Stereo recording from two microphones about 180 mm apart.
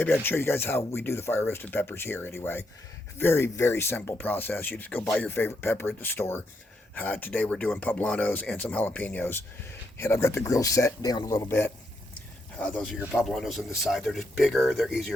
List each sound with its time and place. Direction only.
0.0 s speech: 10° left (ahead or behind)